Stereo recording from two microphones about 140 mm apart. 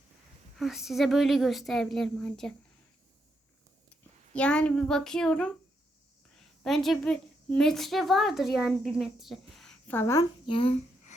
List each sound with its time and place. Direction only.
0.6 s speech: centre (ahead or behind)
4.4 s a woman's voice: 5° left (ahead or behind)
9.9 s a child's voice: 20° left (ahead or behind)
10.4 s a child's voice: 40° left (ahead or behind)